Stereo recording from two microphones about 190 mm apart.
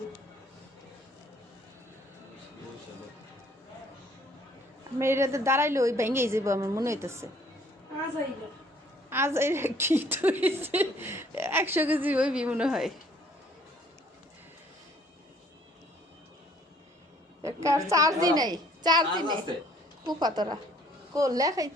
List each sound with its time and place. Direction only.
4.9 s a woman's voice: 15° right (ahead or behind)
9.0 s a woman's voice: 15° right (ahead or behind)
17.4 s a woman's voice: 15° right (ahead or behind)